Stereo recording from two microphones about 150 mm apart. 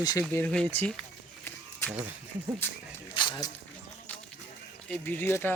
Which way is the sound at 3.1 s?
30° left (ahead or behind).